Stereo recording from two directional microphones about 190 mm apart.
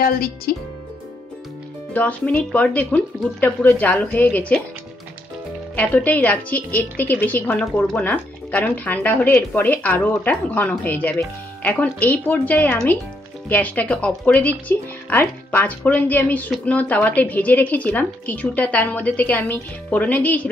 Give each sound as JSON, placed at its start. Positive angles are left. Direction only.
{"t": 0.0, "sound": "a woman's voice", "side_deg": 50}
{"t": 2.0, "sound": "a woman's voice", "side_deg": 10}
{"t": 5.8, "sound": "a woman's voice", "side_deg": 10}